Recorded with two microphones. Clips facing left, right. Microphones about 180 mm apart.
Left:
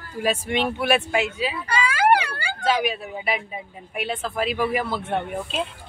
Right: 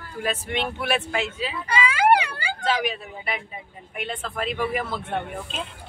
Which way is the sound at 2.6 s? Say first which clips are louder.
Left 3 dB; 5° left (ahead or behind).